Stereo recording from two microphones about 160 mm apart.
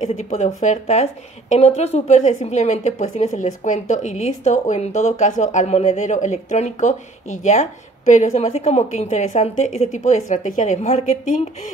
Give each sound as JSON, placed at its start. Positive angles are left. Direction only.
{"t": 0.0, "sound": "a woman's voice", "side_deg": 45}